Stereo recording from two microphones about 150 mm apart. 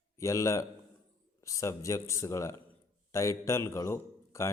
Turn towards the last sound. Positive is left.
turn(degrees=20)  # may be behind; listen again after turning